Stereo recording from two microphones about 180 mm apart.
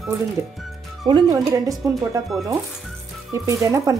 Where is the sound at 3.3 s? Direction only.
15° right (ahead or behind).